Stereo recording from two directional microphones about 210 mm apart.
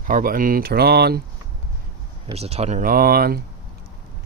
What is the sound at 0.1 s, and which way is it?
Speech, 40° right (ahead or behind).